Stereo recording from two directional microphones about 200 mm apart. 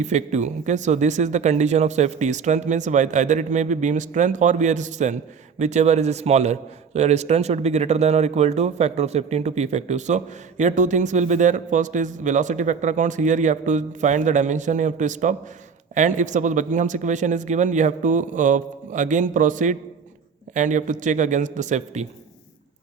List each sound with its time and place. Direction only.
0.0 s speech: 35° right (ahead or behind)